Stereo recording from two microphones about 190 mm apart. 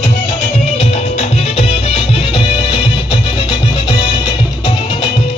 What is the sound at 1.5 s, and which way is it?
Music, 30° left (ahead or behind).